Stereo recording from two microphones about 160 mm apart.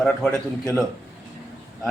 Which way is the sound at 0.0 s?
5° left (ahead or behind).